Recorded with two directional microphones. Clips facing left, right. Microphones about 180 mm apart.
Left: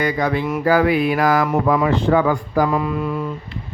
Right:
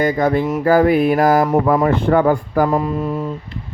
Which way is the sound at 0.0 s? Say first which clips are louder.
Right 4 dB; 50° right (ahead or behind).